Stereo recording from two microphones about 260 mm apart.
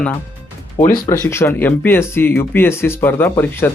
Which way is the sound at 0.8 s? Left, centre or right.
Left.